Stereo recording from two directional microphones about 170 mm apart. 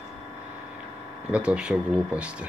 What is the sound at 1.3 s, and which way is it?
Speech, 5° right (ahead or behind).